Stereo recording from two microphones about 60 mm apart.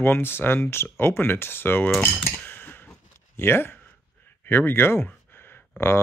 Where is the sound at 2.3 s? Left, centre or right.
Left.